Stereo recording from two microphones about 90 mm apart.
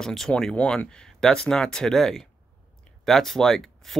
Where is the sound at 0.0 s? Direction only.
5° left (ahead or behind).